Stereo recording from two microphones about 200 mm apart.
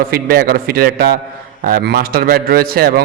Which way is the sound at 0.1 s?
50° right (ahead or behind).